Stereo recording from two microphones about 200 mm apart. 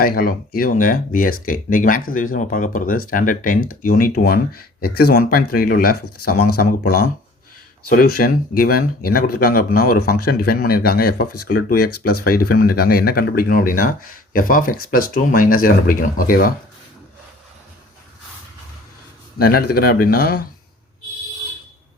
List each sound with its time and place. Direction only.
0.0 s speech: 45° left (ahead or behind)
19.4 s speech: 50° left (ahead or behind)